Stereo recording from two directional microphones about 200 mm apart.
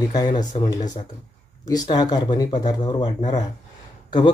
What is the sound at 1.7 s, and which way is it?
Speech, 20° left (ahead or behind).